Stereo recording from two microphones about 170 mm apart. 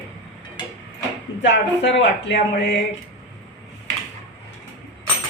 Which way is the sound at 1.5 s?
90° left.